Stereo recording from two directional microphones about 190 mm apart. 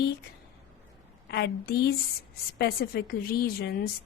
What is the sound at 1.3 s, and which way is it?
A woman's voice, 60° left (ahead or behind).